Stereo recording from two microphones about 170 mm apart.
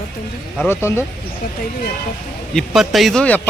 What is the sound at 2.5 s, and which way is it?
Speech, centre (ahead or behind).